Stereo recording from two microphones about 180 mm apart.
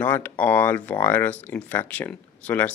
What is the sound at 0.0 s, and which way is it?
Speech, 10° left (ahead or behind).